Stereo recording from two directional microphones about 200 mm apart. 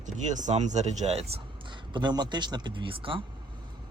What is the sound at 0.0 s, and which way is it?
Speech, 40° right (ahead or behind).